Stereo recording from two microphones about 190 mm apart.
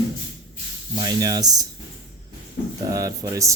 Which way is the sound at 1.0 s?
20° right (ahead or behind).